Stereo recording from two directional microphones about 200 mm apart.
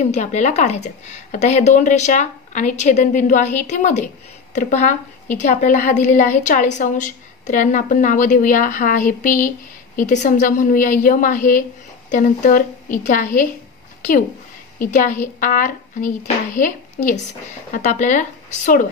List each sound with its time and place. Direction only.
0.0 s speech: 35° left (ahead or behind)
14.8 s a woman's voice: 40° left (ahead or behind)